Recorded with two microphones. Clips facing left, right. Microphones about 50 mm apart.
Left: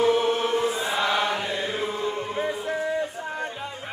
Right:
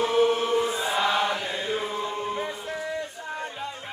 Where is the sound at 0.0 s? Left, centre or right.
Centre.